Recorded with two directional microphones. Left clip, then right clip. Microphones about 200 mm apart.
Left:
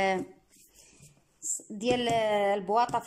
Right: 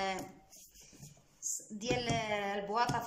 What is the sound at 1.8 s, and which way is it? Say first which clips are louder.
Speech: left 9 dB; 45° left (ahead or behind).